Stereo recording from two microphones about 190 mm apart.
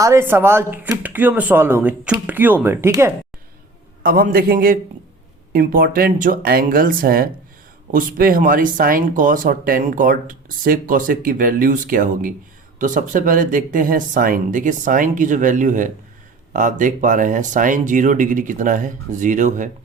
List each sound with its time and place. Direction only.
0.0 s speech: 15° right (ahead or behind)
4.0 s speech: 50° right (ahead or behind)